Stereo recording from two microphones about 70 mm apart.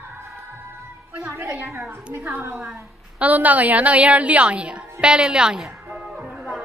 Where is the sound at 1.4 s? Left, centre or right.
Right; by 5.6 s centre.